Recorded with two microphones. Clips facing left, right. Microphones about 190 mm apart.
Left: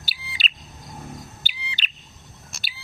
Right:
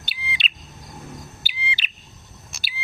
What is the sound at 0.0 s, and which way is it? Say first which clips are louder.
Bird: right 3 dB; 5° left (ahead or behind).